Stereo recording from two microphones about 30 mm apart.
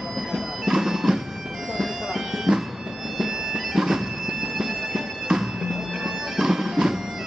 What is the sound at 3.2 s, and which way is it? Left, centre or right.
Music, centre.